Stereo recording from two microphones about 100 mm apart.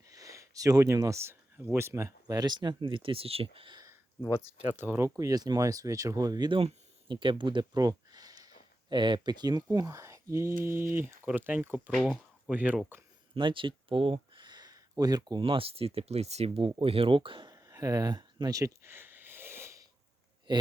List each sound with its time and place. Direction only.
0.1 s speech: 35° right (ahead or behind)
2.2 s speech: 45° right (ahead or behind); by 3.8 s 65° right (ahead or behind)
4.8 s speech: 25° right (ahead or behind); by 6.6 s 45° right (ahead or behind)
7.1 s speech: 55° right (ahead or behind); by 12.8 s 15° right (ahead or behind)
13.3 s a sound: 55° right (ahead or behind); by 15.4 s 40° right (ahead or behind)
15.4 s speech: 60° right (ahead or behind); by 16.7 s 85° right
16.8 s speech: 65° right (ahead or behind)
17.5 s a sound: 35° right (ahead or behind)
20.5 s speech: 50° right (ahead or behind)